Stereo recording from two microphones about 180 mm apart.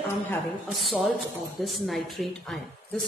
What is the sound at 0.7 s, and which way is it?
Speech, centre (ahead or behind).